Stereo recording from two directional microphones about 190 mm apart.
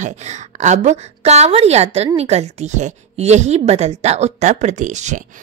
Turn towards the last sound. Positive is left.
turn(degrees=-40)  # may be behind; listen again after turning